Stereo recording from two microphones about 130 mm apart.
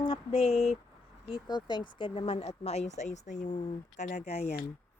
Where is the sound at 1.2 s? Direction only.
40° left (ahead or behind); by 3.5 s 65° left (ahead or behind).